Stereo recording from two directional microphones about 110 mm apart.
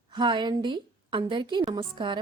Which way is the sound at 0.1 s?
45° right (ahead or behind).